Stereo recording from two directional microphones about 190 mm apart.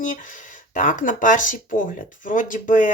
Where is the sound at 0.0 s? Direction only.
45° left (ahead or behind).